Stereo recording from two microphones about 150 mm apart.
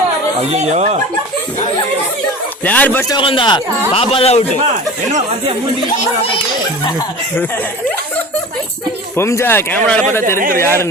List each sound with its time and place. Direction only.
0.5 s speech: 45° right (ahead or behind)
2.6 s speech: 10° left (ahead or behind)
3.1 s speech: 35° left (ahead or behind)
9.1 s speech: 20° left (ahead or behind)
10.3 s speech: 65° right (ahead or behind)
10.6 s speech: 15° left (ahead or behind)